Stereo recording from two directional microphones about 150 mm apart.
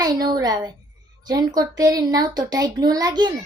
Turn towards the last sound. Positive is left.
turn(degrees=-25)  # may be behind; listen again after turning